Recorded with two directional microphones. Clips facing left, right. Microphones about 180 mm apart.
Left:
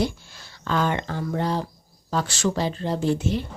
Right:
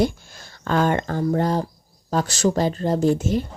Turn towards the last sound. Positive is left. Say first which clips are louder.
# right 4 dB
turn(degrees=-45)  # may be behind; listen again after turning